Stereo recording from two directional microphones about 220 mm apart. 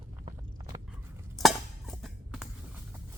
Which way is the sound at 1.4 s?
Centre (ahead or behind).